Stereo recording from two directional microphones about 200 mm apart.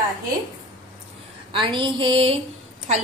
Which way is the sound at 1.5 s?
25° right (ahead or behind).